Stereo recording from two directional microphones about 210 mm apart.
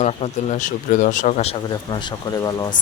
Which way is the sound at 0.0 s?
30° left (ahead or behind).